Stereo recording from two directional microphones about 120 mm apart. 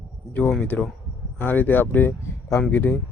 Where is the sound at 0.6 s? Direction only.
10° left (ahead or behind).